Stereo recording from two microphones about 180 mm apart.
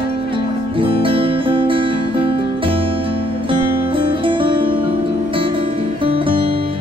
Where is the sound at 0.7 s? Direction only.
30° right (ahead or behind).